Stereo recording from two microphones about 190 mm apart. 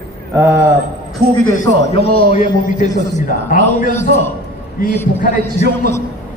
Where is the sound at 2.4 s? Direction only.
45° left (ahead or behind).